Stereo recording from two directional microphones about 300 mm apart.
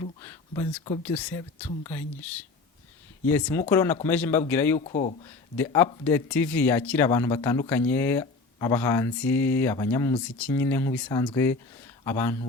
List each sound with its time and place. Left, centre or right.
0.0 s a man's voice: centre
4.8 s speech: left
5.5 s a man's voice: centre